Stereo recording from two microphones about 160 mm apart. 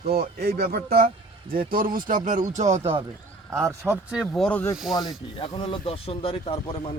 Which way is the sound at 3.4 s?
15° right (ahead or behind).